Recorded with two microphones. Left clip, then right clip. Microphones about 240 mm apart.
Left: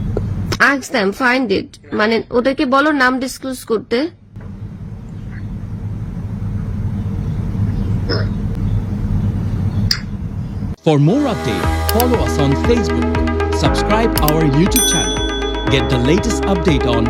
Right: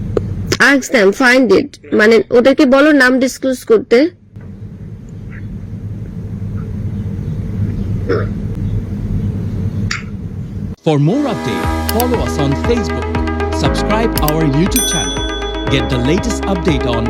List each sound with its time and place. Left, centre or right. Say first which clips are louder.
0.5 s speech: right 4 dB; centre
8.0 s a sound: right 6 dB; centre
10.8 s speech: even; centre